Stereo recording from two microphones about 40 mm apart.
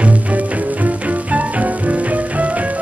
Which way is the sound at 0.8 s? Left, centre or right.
Right.